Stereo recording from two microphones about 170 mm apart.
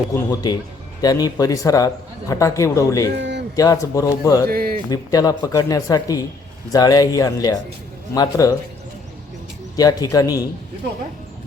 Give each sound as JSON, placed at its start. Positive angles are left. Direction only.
{"t": 0.1, "sound": "a man's voice", "side_deg": 15}
{"t": 3.2, "sound": "a sound", "side_deg": -90}
{"t": 3.5, "sound": "speech", "side_deg": 20}
{"t": 4.4, "sound": "speech", "side_deg": -60}
{"t": 4.9, "sound": "speech", "side_deg": 20}
{"t": 9.7, "sound": "speech", "side_deg": 20}